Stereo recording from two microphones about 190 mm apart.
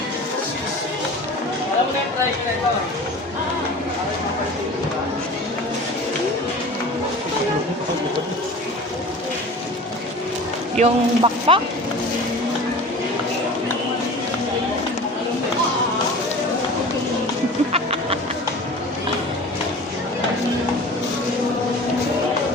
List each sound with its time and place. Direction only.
10.8 s speech: 30° right (ahead or behind)
17.7 s music: 30° right (ahead or behind)